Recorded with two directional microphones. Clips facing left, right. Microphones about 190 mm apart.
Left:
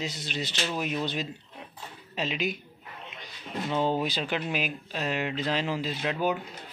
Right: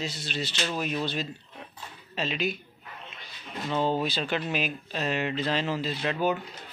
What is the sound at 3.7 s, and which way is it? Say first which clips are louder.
Speech: right 1 dB; 15° left (ahead or behind).